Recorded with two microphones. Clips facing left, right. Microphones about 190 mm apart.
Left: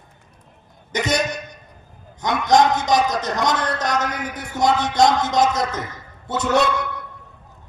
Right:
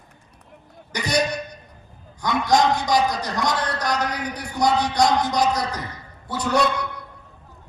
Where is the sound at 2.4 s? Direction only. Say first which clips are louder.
Left 3 dB; 20° left (ahead or behind).